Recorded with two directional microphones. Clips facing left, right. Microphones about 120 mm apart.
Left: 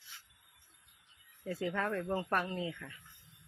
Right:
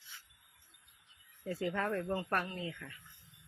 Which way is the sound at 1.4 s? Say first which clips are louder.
Even; centre (ahead or behind).